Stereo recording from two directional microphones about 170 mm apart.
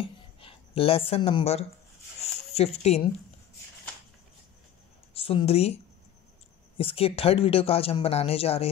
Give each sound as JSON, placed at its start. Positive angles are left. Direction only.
{"t": 0.4, "sound": "speech", "side_deg": 30}
{"t": 5.1, "sound": "speech", "side_deg": 35}
{"t": 6.8, "sound": "speech", "side_deg": 35}